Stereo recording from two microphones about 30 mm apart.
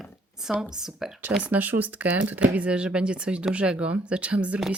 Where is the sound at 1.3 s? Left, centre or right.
Right.